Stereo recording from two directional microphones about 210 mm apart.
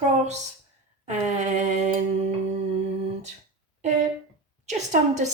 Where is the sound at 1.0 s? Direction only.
35° right (ahead or behind).